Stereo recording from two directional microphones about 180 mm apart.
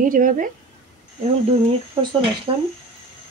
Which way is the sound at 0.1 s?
50° right (ahead or behind).